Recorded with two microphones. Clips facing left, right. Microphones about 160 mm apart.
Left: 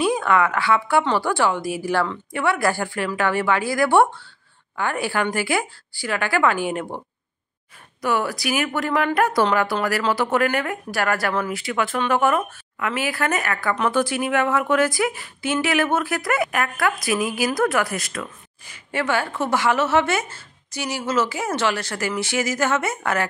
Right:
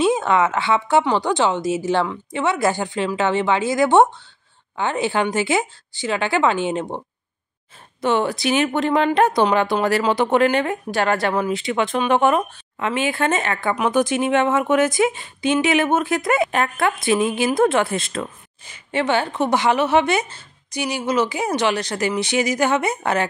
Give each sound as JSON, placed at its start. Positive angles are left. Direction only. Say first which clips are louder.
{"t": 0.0, "sound": "speech", "louder": "right 2 dB", "side_deg": -25}
{"t": 8.0, "sound": "speech", "louder": "right 3 dB", "side_deg": -25}